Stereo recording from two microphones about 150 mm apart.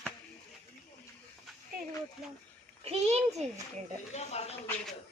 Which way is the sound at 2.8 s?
45° right (ahead or behind).